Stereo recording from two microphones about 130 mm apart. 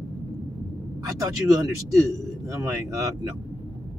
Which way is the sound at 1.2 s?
25° right (ahead or behind).